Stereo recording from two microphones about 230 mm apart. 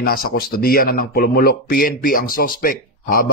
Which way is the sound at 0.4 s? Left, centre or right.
Left.